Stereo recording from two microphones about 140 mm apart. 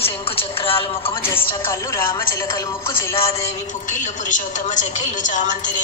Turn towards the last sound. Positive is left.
turn(degrees=65)  # may be behind; listen again after turning